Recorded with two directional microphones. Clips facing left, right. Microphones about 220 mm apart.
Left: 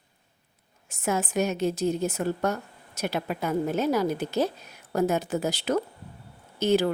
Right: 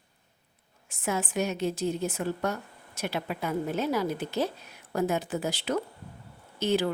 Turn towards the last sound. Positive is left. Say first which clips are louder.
# left 4 dB
turn(degrees=45)  # may be behind; listen again after turning